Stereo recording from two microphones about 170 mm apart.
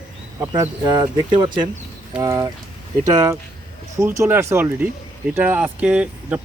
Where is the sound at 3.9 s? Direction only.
15° right (ahead or behind).